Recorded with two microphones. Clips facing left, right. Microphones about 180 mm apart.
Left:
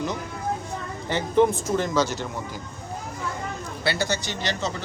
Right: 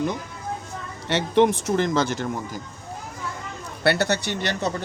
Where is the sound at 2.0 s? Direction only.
55° right (ahead or behind).